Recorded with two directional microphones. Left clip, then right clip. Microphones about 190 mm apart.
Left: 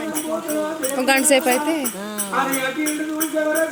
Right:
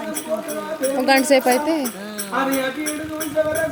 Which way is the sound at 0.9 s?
15° right (ahead or behind).